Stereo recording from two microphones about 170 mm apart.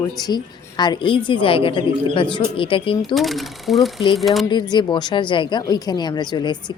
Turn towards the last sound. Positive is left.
turn(degrees=25)  # may be behind; listen again after turning